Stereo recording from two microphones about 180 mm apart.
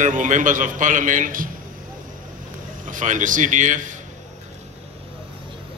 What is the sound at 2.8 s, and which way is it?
A man's voice, 45° right (ahead or behind).